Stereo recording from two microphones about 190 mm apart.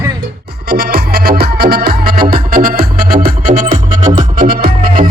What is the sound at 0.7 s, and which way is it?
Music, 55° right (ahead or behind).